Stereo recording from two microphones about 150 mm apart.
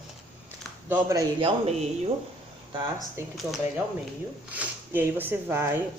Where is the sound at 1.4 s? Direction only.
40° right (ahead or behind).